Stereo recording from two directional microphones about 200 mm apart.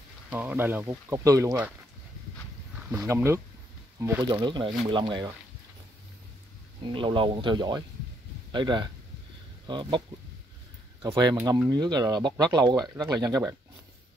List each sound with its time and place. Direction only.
0.3 s speech: 10° right (ahead or behind)
3.1 s speech: 10° right (ahead or behind)
6.8 s speech: 25° right (ahead or behind)